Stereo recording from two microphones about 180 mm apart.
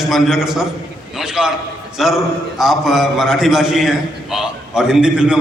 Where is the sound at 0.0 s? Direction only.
Centre (ahead or behind).